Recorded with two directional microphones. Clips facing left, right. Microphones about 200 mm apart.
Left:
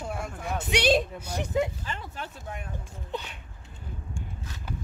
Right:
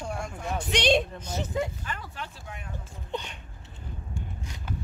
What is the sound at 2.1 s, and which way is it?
Speech, 40° left (ahead or behind).